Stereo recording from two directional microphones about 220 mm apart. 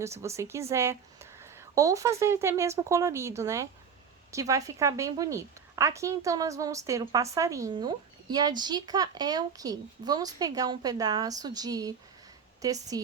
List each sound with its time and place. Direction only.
0.0 s a woman's voice: 15° right (ahead or behind)